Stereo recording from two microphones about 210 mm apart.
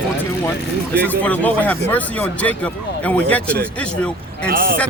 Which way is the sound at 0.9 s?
10° left (ahead or behind).